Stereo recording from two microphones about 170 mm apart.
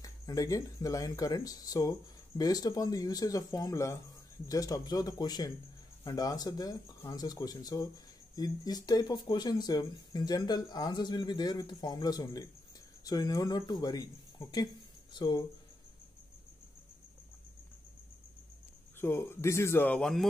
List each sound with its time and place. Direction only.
0.0 s speech: 20° left (ahead or behind)
18.9 s a man's voice: 15° left (ahead or behind)